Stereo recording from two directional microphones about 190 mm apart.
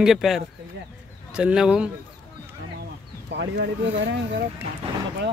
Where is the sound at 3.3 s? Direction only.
65° right (ahead or behind).